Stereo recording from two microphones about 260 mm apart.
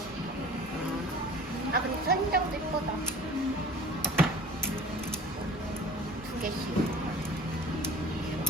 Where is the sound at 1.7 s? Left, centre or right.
Right.